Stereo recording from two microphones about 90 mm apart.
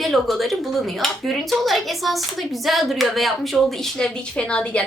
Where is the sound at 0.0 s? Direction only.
Centre (ahead or behind).